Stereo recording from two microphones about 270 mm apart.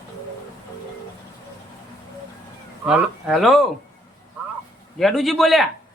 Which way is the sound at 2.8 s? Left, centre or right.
Centre.